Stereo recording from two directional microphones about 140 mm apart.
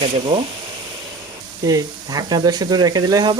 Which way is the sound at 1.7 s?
25° right (ahead or behind).